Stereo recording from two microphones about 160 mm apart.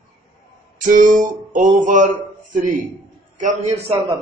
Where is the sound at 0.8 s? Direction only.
55° right (ahead or behind).